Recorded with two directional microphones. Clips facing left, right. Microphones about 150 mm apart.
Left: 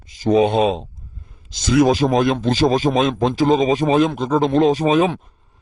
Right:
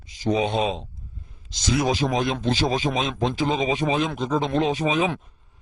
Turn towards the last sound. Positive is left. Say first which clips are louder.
# left 7 dB
turn(degrees=45)  # may be behind; listen again after turning